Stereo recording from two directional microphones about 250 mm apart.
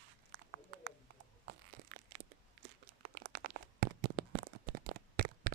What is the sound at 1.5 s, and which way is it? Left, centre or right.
Crushing, right.